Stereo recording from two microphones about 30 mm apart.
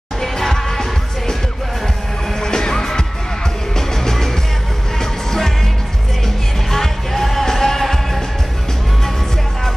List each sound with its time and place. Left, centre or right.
0.2 s music: centre
2.4 s music: left
6.2 s music: centre